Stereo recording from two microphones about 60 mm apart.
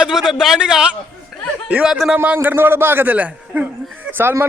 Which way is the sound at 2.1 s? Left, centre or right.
Right.